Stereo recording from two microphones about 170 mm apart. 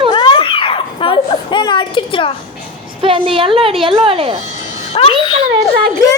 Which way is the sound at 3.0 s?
30° right (ahead or behind).